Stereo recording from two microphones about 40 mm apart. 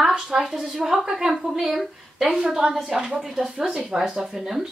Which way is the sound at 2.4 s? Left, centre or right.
Centre.